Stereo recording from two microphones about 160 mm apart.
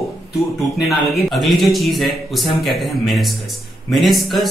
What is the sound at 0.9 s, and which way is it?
Speech, centre (ahead or behind).